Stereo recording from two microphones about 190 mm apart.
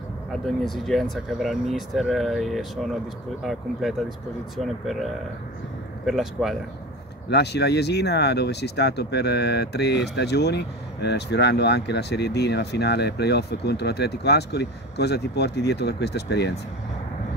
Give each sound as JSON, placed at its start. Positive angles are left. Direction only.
{"t": 0.3, "sound": "speech", "side_deg": 0}
{"t": 4.6, "sound": "speech", "side_deg": 0}
{"t": 6.0, "sound": "speech", "side_deg": 0}
{"t": 7.2, "sound": "speech", "side_deg": 60}